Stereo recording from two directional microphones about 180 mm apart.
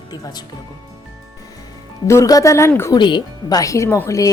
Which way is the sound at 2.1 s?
15° left (ahead or behind).